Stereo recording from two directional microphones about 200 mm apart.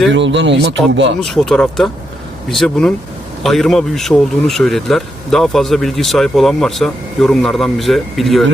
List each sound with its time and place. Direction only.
0.1 s speech: 65° right (ahead or behind)
1.2 s a man's voice: centre (ahead or behind)